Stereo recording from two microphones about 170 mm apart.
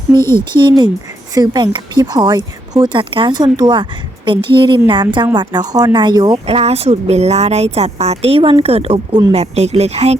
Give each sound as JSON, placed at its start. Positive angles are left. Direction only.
{"t": 0.2, "sound": "speech", "side_deg": 15}
{"t": 0.5, "sound": "speech", "side_deg": -25}
{"t": 6.5, "sound": "a woman's voice", "side_deg": -35}